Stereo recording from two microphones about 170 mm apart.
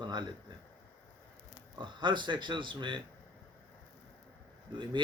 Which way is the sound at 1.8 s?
25° right (ahead or behind).